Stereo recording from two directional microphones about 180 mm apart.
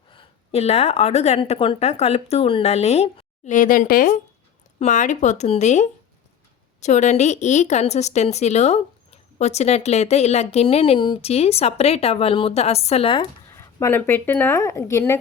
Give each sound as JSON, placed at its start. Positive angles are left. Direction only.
{"t": 0.1, "sound": "a woman's voice", "side_deg": 30}
{"t": 13.6, "sound": "speech", "side_deg": 15}